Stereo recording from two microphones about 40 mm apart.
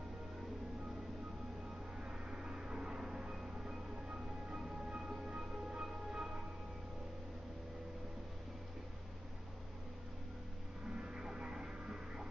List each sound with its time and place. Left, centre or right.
2.0 s train: centre
5.3 s music: right
6.1 s music: centre
11.0 s a sound: centre